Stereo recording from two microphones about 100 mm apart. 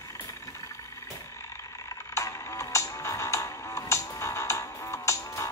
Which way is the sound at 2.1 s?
30° left (ahead or behind).